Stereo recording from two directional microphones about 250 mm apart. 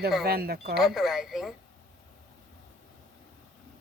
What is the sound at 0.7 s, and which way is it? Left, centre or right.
Speech, centre.